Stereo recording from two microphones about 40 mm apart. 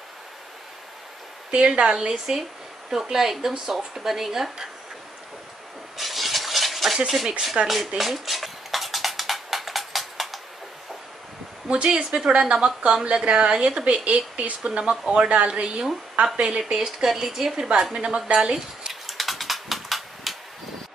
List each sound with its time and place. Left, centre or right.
1.5 s speech: right; by 4.6 s centre
5.9 s a sound: centre
7.1 s speech: centre
8.0 s a sound: centre
11.6 s speech: right
12.3 s speech: right
12.5 s speech: centre; by 14.7 s right
14.7 s speech: right
17.1 s speech: centre
17.9 s speech: right
19.0 s typewriter: centre